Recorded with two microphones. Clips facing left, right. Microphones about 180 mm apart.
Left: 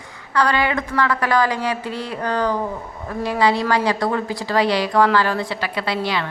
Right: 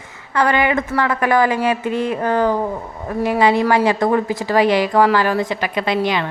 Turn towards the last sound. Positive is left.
turn(degrees=-20)  # may be behind; listen again after turning